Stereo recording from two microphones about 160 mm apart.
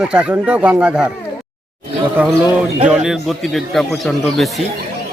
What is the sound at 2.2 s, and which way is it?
A man's voice, 10° right (ahead or behind).